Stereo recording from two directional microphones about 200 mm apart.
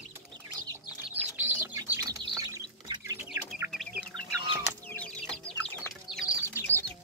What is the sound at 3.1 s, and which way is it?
Bird, 10° right (ahead or behind).